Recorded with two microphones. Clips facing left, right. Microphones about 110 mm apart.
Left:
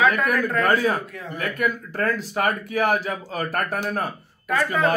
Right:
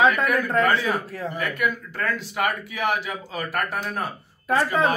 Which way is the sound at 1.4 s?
40° left (ahead or behind).